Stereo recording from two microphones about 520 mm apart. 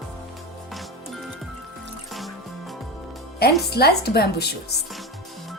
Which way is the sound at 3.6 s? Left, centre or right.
Centre.